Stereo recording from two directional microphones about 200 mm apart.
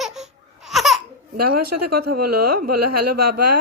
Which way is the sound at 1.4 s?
50° right (ahead or behind).